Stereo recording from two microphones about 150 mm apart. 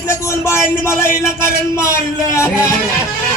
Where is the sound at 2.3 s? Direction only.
20° left (ahead or behind).